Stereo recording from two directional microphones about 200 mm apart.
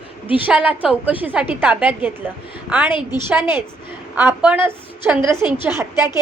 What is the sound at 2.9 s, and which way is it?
Speech, 25° left (ahead or behind).